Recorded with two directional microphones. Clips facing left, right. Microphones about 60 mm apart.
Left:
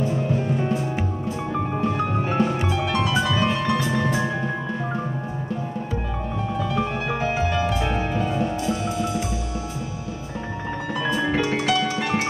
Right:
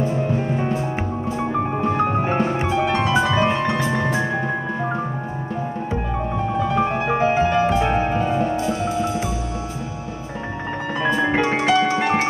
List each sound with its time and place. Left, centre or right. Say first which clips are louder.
1.4 s music: right 3 dB; right
5.9 s music: right 4 dB; right
11.0 s music: right 4 dB; right